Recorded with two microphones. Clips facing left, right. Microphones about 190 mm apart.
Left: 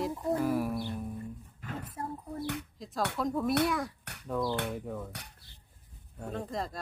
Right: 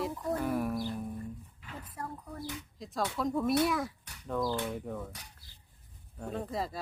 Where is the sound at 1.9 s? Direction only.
25° left (ahead or behind).